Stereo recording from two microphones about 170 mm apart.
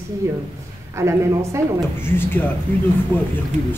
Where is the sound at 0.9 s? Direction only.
15° right (ahead or behind).